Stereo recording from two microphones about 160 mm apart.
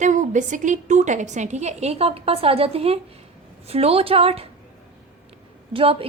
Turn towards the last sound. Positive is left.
turn(degrees=-35)  # may be behind; listen again after turning